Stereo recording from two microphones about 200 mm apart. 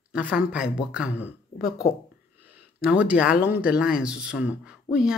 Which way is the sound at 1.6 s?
50° left (ahead or behind).